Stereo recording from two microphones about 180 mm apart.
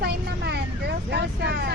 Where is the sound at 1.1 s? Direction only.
65° right (ahead or behind).